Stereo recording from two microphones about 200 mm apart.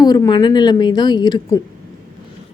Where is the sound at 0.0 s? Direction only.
20° left (ahead or behind).